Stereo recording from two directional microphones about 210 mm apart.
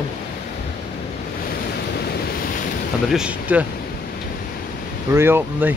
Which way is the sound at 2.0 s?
50° left (ahead or behind).